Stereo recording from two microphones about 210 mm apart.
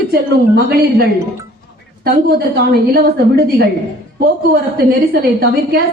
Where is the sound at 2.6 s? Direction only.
50° right (ahead or behind).